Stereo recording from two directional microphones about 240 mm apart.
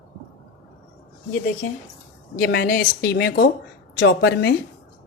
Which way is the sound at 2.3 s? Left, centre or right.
Left.